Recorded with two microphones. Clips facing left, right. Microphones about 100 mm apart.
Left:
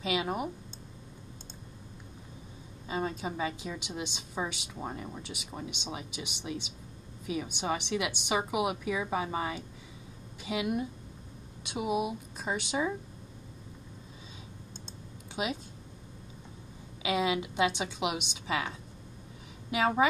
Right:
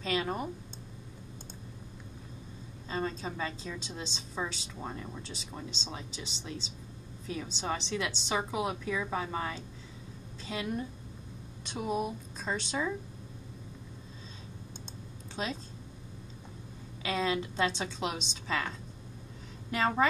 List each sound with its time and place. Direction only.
0.0 s a woman's voice: 10° left (ahead or behind)
2.9 s a woman's voice: 15° left (ahead or behind)
15.4 s a woman's voice: 10° left (ahead or behind)
17.0 s a woman's voice: 15° left (ahead or behind)